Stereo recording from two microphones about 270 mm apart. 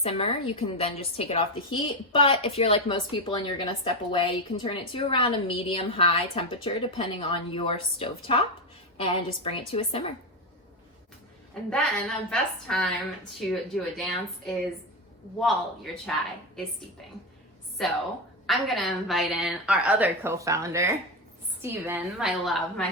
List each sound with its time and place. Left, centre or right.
0.0 s a woman's voice: left
11.7 s a woman's voice: centre
17.8 s a woman's voice: centre